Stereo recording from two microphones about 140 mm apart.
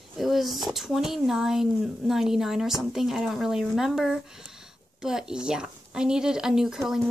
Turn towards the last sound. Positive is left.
turn(degrees=-5)  # may be behind; listen again after turning